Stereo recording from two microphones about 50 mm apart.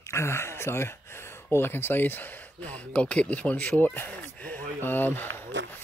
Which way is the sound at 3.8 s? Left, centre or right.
Left.